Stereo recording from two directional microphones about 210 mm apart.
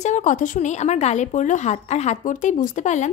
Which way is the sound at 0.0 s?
35° left (ahead or behind).